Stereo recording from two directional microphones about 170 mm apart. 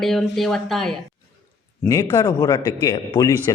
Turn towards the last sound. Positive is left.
turn(degrees=25)  # may be behind; listen again after turning